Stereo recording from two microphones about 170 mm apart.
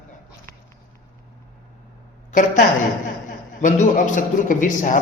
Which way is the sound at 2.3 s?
50° left (ahead or behind).